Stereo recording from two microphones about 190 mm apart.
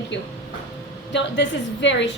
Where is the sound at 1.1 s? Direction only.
70° left (ahead or behind).